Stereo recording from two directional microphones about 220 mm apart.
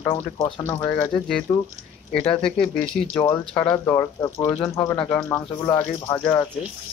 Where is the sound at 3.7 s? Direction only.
15° left (ahead or behind).